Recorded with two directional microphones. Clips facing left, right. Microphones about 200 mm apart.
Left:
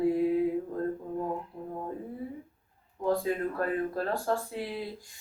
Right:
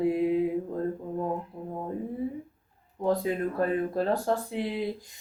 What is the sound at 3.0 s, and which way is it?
Speech, 20° right (ahead or behind).